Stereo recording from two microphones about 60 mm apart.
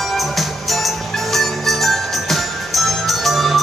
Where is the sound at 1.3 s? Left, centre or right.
Centre.